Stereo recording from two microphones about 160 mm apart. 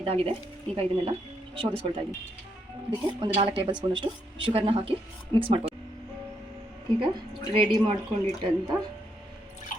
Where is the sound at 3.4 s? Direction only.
35° right (ahead or behind).